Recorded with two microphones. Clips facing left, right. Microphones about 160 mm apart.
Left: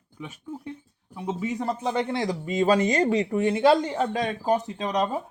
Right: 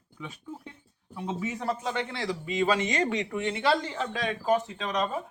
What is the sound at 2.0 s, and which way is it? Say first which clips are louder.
Speech: left 6 dB; 40° left (ahead or behind).